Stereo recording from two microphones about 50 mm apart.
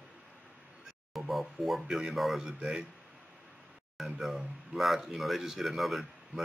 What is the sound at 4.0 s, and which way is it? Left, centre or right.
Speech, centre.